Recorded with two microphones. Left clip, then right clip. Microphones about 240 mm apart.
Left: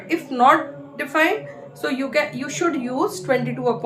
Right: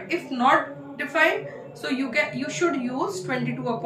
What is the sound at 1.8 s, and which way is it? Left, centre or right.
Speech, centre.